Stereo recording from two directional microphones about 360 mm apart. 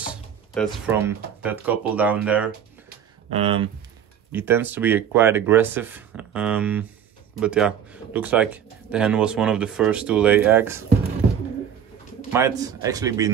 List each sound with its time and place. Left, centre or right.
0.1 s speech: centre
3.3 s a man's voice: centre
12.3 s a man's voice: centre